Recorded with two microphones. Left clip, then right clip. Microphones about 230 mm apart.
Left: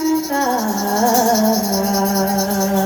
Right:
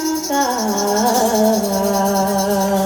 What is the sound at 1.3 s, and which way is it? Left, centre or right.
Music, right.